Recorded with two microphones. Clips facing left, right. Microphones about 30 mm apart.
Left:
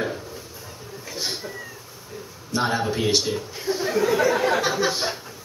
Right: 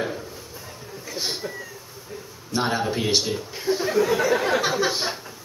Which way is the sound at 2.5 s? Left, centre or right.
Centre.